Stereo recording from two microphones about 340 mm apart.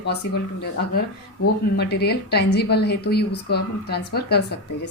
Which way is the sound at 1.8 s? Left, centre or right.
Left.